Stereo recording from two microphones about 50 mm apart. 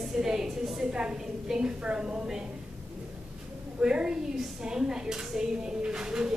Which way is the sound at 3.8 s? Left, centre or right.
Centre.